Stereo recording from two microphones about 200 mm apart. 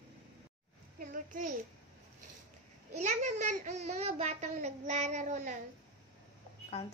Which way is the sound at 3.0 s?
35° right (ahead or behind).